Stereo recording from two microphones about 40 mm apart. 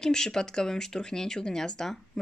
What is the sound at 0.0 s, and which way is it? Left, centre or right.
Speech, centre.